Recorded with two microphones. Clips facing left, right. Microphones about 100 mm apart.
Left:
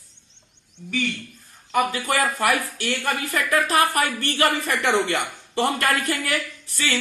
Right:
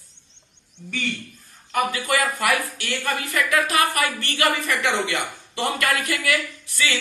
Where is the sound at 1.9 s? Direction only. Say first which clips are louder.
Even; 40° left (ahead or behind).